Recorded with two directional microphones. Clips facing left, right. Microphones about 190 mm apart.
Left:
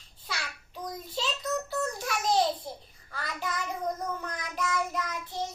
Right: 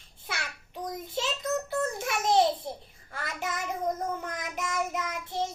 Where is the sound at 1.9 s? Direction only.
20° right (ahead or behind).